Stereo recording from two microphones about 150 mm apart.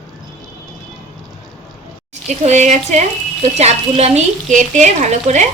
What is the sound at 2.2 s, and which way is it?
Speech, 50° right (ahead or behind).